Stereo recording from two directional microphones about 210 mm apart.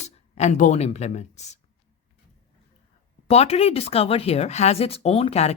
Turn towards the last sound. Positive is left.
turn(degrees=30)  # may be behind; listen again after turning